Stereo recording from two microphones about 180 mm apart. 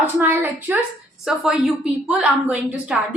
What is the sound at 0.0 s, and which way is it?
A woman's voice, 10° right (ahead or behind).